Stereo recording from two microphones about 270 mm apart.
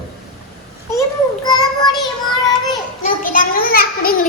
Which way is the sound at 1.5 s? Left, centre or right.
Centre.